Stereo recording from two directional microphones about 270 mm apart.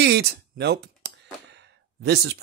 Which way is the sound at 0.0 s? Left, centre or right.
Right.